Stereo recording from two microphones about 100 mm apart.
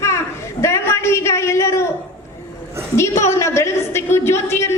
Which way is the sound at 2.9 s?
25° left (ahead or behind).